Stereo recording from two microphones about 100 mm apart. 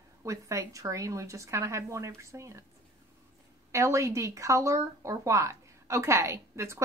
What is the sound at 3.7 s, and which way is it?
A woman's voice, 30° right (ahead or behind).